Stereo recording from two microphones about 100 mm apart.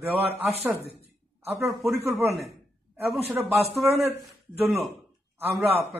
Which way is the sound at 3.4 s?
30° right (ahead or behind).